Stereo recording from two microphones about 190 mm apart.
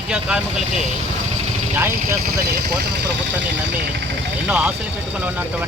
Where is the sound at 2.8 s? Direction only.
60° right (ahead or behind).